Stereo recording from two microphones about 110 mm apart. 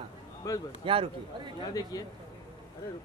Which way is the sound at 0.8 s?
55° right (ahead or behind).